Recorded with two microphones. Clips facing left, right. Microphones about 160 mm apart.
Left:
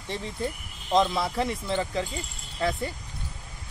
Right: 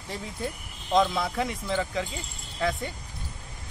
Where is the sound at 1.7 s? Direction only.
30° left (ahead or behind).